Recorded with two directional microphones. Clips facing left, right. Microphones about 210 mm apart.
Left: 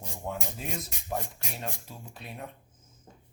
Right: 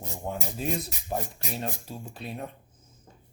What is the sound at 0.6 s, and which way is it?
Speech, 35° right (ahead or behind).